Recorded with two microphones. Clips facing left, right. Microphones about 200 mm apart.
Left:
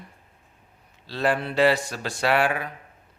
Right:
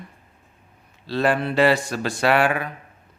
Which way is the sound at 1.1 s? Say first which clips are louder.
Right 4 dB; 70° right (ahead or behind).